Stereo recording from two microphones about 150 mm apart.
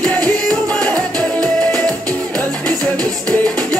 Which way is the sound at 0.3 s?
5° left (ahead or behind).